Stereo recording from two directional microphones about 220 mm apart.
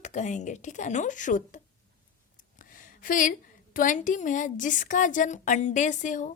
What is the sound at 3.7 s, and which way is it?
A woman's voice, 35° left (ahead or behind).